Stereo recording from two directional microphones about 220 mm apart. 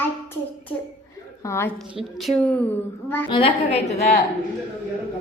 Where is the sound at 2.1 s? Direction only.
Centre (ahead or behind).